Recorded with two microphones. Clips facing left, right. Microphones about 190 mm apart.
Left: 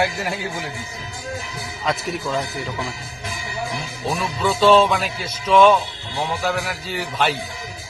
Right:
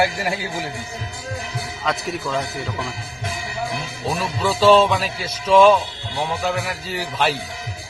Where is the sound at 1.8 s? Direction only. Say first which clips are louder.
Left 1 dB; centre (ahead or behind).